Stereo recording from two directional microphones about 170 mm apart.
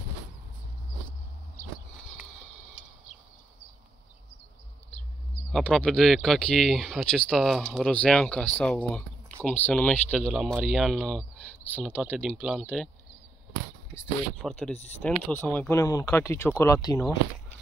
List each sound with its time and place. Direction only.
5.5 s speech: 5° left (ahead or behind)
14.4 s speech: 5° left (ahead or behind)